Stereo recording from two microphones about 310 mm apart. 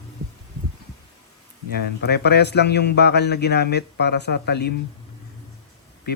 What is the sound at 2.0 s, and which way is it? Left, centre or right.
A man's voice, left.